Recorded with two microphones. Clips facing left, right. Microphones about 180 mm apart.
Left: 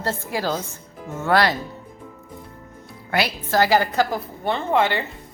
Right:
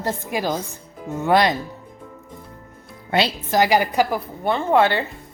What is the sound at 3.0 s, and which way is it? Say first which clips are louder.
A woman's voice: right 2 dB; 20° right (ahead or behind).